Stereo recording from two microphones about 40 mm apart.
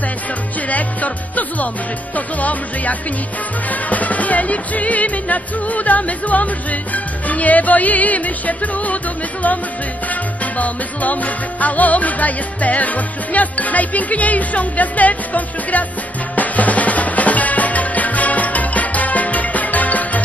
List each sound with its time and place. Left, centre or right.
0.6 s music: left